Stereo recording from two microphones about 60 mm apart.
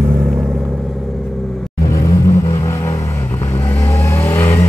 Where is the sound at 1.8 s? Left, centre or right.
Left.